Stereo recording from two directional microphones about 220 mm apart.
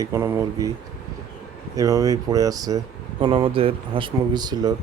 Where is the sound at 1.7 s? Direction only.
15° right (ahead or behind).